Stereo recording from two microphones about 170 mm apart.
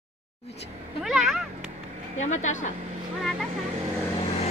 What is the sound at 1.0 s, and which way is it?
Speech, centre (ahead or behind).